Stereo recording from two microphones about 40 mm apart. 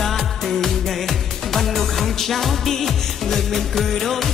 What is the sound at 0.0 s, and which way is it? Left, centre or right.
Music, centre.